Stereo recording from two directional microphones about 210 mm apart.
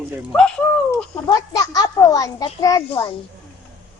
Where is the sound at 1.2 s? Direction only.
20° left (ahead or behind).